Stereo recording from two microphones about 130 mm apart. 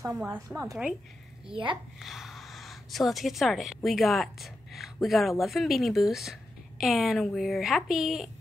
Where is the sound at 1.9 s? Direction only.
Centre (ahead or behind).